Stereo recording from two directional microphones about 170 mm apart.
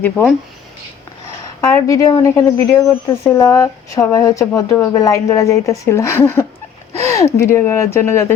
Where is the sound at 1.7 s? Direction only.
20° left (ahead or behind).